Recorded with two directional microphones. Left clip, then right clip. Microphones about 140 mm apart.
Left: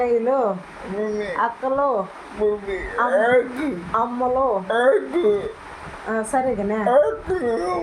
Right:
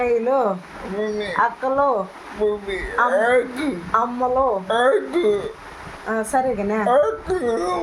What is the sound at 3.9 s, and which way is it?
Speech, 15° right (ahead or behind).